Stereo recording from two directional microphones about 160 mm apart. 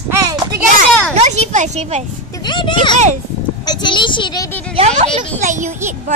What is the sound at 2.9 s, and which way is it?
Speech, 45° right (ahead or behind).